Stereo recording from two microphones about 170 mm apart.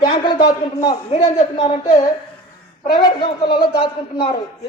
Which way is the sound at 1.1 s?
35° left (ahead or behind).